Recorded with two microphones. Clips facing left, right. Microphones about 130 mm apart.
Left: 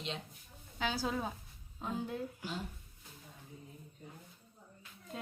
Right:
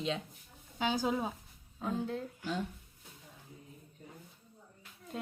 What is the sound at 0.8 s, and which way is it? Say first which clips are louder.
Speech: right 4 dB; 15° right (ahead or behind).